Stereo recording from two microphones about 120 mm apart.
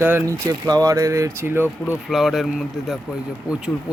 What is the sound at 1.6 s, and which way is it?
Speech, 15° left (ahead or behind).